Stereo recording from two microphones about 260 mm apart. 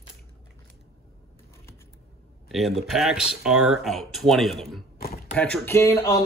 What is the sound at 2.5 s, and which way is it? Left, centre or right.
A man's voice, centre.